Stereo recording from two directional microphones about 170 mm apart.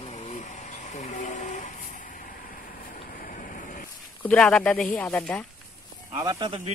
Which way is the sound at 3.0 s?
55° left (ahead or behind).